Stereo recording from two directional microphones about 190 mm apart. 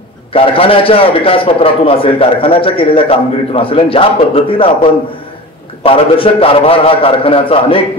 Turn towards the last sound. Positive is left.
turn(degrees=30)  # may be behind; listen again after turning